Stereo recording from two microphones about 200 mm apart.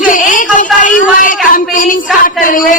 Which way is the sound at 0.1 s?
40° left (ahead or behind).